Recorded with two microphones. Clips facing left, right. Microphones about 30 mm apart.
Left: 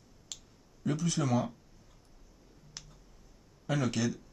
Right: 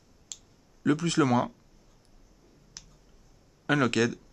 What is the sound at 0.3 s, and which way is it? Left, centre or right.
Clicking, centre.